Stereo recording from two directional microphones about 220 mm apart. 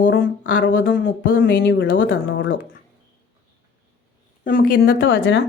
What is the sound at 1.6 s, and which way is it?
Speech, 55° left (ahead or behind).